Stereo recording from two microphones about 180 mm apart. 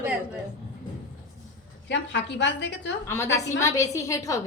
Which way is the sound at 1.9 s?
80° left.